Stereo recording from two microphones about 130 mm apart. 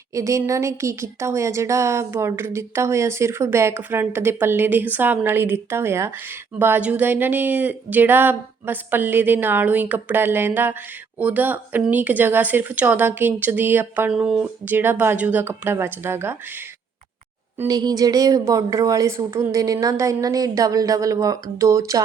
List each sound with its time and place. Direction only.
0.1 s a woman's voice: 25° right (ahead or behind)
14.1 s speech: 5° right (ahead or behind)
17.7 s a woman's voice: 30° right (ahead or behind)